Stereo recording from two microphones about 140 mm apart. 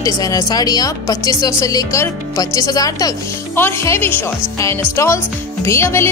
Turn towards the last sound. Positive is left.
turn(degrees=20)  # may be behind; listen again after turning